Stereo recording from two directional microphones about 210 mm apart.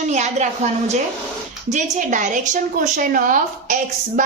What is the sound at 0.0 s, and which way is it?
A woman's voice, 35° right (ahead or behind).